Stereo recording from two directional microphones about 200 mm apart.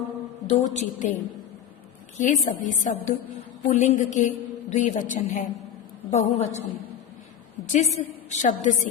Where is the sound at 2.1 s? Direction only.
40° left (ahead or behind).